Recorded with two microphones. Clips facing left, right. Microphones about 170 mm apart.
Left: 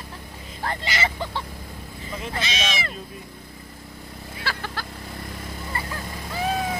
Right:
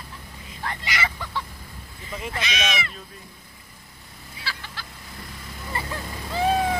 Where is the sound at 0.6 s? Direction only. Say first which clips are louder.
Left 3 dB; 35° left (ahead or behind).